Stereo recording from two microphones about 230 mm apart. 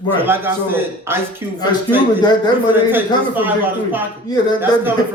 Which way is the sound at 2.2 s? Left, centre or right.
Centre.